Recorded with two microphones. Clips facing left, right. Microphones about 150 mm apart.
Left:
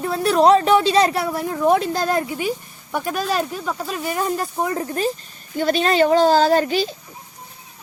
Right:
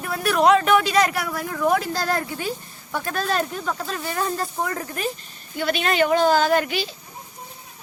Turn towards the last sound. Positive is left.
turn(degrees=40)  # may be behind; listen again after turning